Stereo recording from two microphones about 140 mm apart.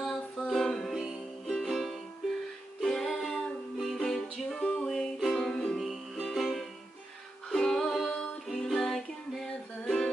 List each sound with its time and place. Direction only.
0.0 s music: centre (ahead or behind)